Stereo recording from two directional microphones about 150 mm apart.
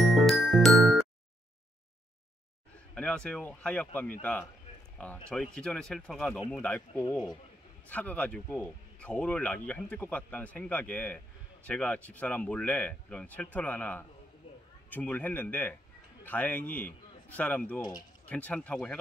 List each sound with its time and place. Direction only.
0.0 s music: centre (ahead or behind)
2.9 s speech: 5° left (ahead or behind)
7.9 s speech: 10° left (ahead or behind)